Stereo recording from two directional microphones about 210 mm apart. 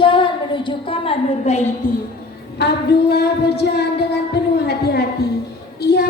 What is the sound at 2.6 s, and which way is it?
Singing, 50° left (ahead or behind).